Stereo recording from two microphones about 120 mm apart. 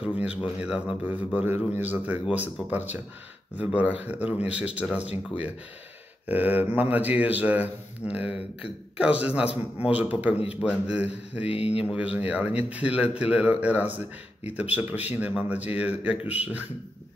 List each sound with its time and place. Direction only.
0.0 s a man's voice: 10° right (ahead or behind)
6.2 s a man's voice: 15° right (ahead or behind)
11.4 s speech: 55° left (ahead or behind)
11.8 s a man's voice: 10° right (ahead or behind)